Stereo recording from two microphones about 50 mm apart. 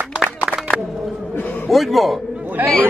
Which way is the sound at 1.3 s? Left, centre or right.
Left.